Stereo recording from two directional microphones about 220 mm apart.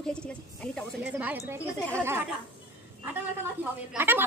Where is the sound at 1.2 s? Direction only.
10° right (ahead or behind).